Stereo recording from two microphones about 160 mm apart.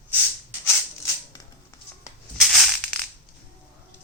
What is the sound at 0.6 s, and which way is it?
Music, 15° left (ahead or behind).